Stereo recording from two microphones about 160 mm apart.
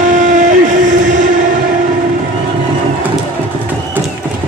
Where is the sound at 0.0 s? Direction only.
50° right (ahead or behind).